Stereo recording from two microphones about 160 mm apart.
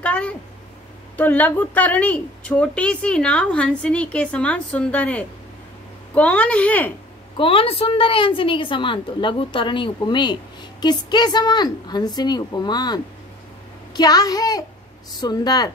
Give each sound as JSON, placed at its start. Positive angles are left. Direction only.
{"t": 0.0, "sound": "a sound", "side_deg": 5}
{"t": 1.1, "sound": "a woman's voice", "side_deg": 10}
{"t": 7.3, "sound": "a woman's voice", "side_deg": 35}